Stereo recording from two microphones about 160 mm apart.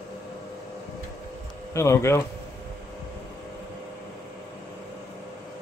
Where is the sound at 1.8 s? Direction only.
15° left (ahead or behind).